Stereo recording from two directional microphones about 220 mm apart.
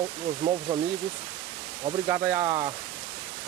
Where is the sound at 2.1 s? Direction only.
15° right (ahead or behind).